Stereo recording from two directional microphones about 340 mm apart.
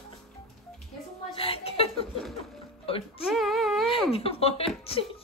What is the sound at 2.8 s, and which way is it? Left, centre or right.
Music, centre.